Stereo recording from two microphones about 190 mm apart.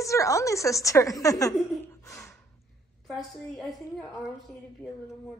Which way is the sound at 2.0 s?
15° left (ahead or behind).